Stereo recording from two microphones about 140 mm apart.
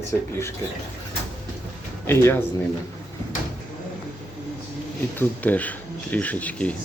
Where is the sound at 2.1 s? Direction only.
15° left (ahead or behind).